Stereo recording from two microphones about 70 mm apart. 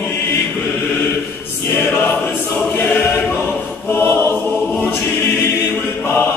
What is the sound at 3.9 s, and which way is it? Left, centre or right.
Choir, left.